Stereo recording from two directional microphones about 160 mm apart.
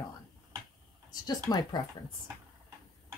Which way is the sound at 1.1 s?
25° left (ahead or behind).